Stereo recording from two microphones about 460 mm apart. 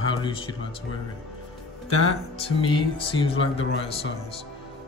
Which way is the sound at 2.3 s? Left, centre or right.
Centre.